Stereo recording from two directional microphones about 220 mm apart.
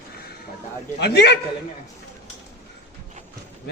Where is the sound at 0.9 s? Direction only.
50° left (ahead or behind).